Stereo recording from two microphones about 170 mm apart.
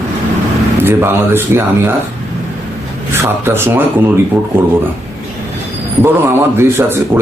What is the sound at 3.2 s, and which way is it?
Speech, 15° right (ahead or behind).